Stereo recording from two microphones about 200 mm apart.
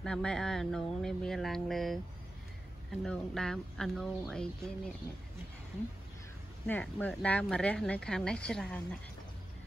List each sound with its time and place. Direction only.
0.0 s speech: 5° left (ahead or behind)
6.7 s speech: 5° left (ahead or behind)